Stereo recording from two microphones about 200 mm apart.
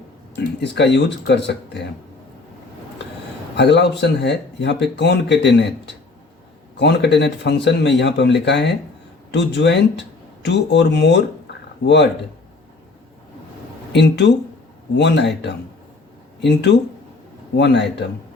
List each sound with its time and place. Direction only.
0.3 s speech: 60° left (ahead or behind)
3.5 s speech: 60° left (ahead or behind)
6.7 s speech: 60° left (ahead or behind)
13.9 s speech: 60° left (ahead or behind)